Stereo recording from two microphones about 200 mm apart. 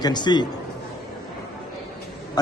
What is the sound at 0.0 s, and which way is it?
Speech, 20° left (ahead or behind).